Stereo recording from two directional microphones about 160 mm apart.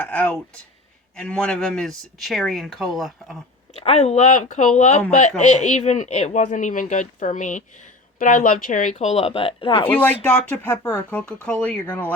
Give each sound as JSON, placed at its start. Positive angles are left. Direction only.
{"t": 0.0, "sound": "speech", "side_deg": 10}
{"t": 3.8, "sound": "speech", "side_deg": 40}
{"t": 9.8, "sound": "speech", "side_deg": 10}
{"t": 11.2, "sound": "speech", "side_deg": 5}